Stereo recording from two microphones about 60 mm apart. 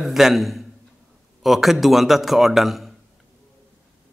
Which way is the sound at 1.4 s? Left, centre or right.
Centre.